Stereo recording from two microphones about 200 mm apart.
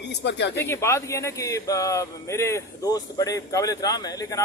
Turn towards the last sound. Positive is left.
turn(degrees=15)  # may be behind; listen again after turning